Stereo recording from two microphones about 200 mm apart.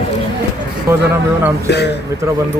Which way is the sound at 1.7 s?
55° left (ahead or behind).